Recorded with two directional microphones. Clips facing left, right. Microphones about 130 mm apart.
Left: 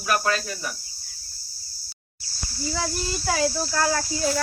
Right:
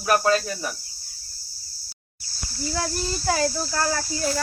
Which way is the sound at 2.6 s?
Centre (ahead or behind).